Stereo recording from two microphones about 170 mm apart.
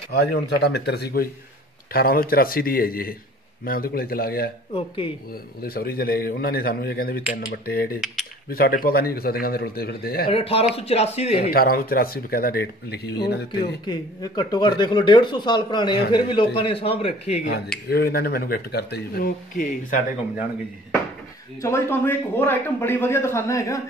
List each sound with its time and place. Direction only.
0.1 s speech: 70° left (ahead or behind)
4.7 s speech: 30° left (ahead or behind)
5.6 s speech: 60° left (ahead or behind)
10.2 s speech: 35° left (ahead or behind)
11.5 s speech: 60° left (ahead or behind)
13.8 s speech: 20° left (ahead or behind)
17.8 s speech: 65° left (ahead or behind)
21.5 s a man's voice: 15° left (ahead or behind)